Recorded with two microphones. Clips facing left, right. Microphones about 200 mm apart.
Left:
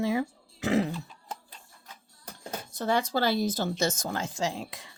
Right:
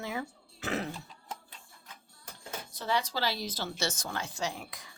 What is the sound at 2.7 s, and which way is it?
Speech, 50° left (ahead or behind).